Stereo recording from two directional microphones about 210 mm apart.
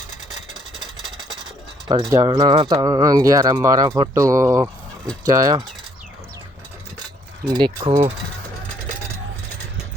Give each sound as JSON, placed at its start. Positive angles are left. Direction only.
{"t": 1.9, "sound": "speech", "side_deg": -15}
{"t": 7.4, "sound": "speech", "side_deg": -20}